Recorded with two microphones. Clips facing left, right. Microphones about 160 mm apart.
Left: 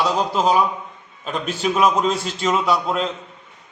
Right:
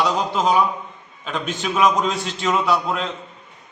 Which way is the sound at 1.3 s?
35° left (ahead or behind).